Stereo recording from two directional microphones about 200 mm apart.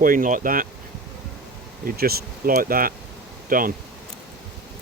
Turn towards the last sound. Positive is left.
turn(degrees=-45)  # may be behind; listen again after turning